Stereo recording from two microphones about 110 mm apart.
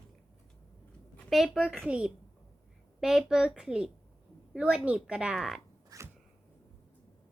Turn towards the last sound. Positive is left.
turn(degrees=-30)  # may be behind; listen again after turning